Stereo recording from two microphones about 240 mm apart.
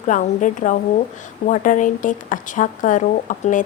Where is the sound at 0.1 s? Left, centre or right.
Left.